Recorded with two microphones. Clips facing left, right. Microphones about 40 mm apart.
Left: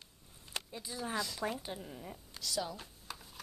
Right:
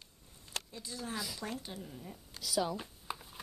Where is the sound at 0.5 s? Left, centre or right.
Centre.